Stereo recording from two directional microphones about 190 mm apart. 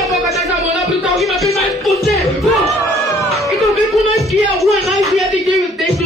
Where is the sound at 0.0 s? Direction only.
Centre (ahead or behind).